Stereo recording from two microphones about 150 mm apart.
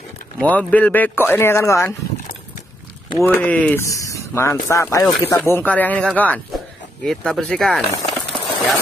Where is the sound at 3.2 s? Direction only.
10° left (ahead or behind).